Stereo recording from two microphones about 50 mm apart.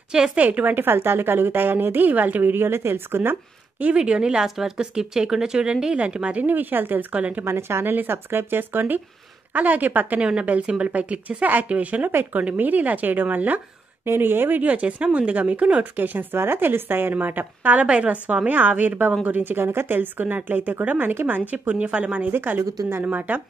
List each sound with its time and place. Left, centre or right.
0.1 s speech: centre
0.4 s a woman's voice: right
3.8 s a woman's voice: centre
6.4 s speech: right
7.4 s a woman's voice: right
7.9 s a woman's voice: right
12.1 s a woman's voice: right
12.4 s speech: right
14.0 s a woman's voice: right
14.6 s a woman's voice: right
16.0 s a woman's voice: right
17.7 s a woman's voice: right
21.1 s a woman's voice: right
21.4 s a woman's voice: right